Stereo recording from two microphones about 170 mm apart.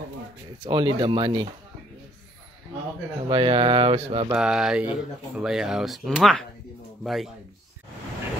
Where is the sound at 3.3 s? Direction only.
30° right (ahead or behind).